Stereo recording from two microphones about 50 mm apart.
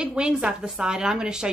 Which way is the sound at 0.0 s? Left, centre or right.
Centre.